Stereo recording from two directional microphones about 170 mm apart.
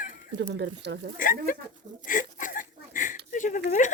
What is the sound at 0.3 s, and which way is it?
Speech, 90° right.